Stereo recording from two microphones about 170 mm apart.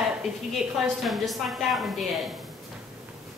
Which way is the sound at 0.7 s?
Centre (ahead or behind).